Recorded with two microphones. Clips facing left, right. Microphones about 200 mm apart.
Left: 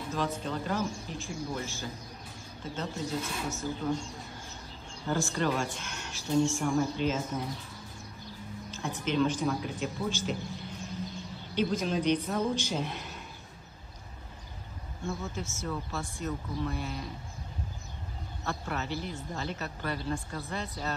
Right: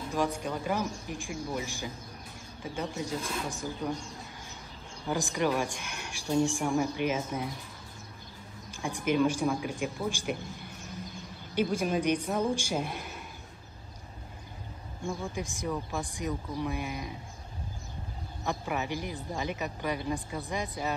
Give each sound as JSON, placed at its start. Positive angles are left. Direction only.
{"t": 0.1, "sound": "speech", "side_deg": -15}
{"t": 5.0, "sound": "speech", "side_deg": -15}
{"t": 8.6, "sound": "speech", "side_deg": -15}
{"t": 11.5, "sound": "a man's voice", "side_deg": -10}
{"t": 15.0, "sound": "speech", "side_deg": -15}
{"t": 18.4, "sound": "speech", "side_deg": -15}